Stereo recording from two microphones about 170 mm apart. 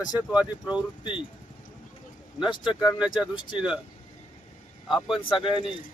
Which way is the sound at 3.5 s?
5° right (ahead or behind).